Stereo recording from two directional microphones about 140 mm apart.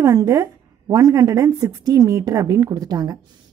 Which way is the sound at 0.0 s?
20° right (ahead or behind).